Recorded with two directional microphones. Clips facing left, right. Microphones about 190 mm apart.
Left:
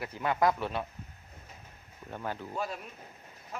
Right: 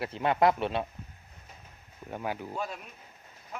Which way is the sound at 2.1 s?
15° right (ahead or behind).